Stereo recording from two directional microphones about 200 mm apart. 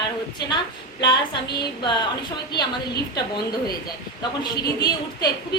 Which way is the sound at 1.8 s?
20° left (ahead or behind).